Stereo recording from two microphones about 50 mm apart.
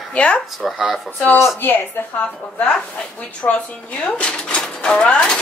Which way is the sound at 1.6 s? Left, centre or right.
Left.